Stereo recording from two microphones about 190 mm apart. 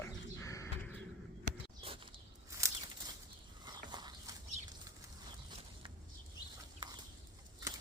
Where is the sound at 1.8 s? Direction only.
30° right (ahead or behind).